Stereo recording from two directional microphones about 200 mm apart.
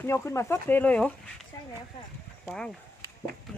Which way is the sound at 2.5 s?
5° left (ahead or behind).